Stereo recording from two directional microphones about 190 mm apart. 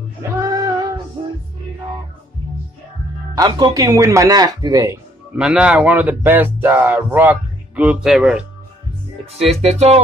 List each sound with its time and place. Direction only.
0.2 s music: 20° right (ahead or behind)
3.3 s speech: 20° right (ahead or behind)
5.4 s speech: 5° right (ahead or behind)
9.3 s music: 30° right (ahead or behind)